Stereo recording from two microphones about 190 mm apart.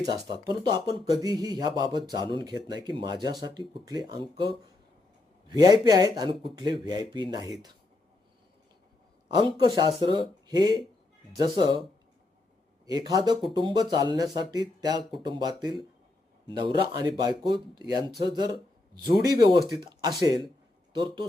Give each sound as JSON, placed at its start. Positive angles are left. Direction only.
{"t": 0.1, "sound": "speech", "side_deg": -25}
{"t": 9.3, "sound": "speech", "side_deg": -20}
{"t": 12.8, "sound": "speech", "side_deg": -20}